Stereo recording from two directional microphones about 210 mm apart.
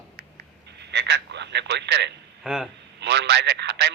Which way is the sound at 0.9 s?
55° right (ahead or behind).